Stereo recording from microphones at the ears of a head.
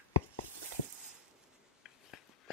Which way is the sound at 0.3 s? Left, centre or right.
Right.